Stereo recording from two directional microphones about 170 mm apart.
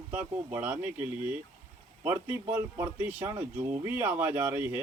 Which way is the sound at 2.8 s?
10° right (ahead or behind).